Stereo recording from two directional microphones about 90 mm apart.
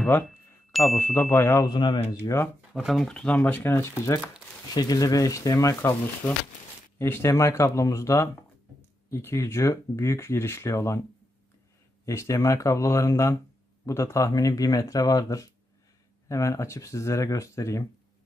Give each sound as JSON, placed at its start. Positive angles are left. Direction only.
{"t": 0.7, "sound": "a sound", "side_deg": 0}
{"t": 0.9, "sound": "speech", "side_deg": 25}
{"t": 1.7, "sound": "speech", "side_deg": 55}
{"t": 2.7, "sound": "speech", "side_deg": 0}
{"t": 4.7, "sound": "speech", "side_deg": 45}
{"t": 12.1, "sound": "speech", "side_deg": 35}